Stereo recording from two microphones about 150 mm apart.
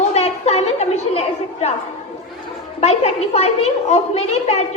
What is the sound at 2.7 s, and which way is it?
A child's voice, 45° left (ahead or behind).